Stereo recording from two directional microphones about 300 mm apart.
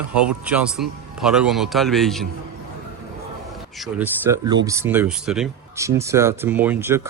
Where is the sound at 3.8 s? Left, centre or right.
Centre.